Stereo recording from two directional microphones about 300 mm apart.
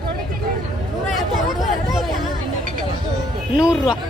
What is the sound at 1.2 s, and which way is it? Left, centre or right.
Speech, centre.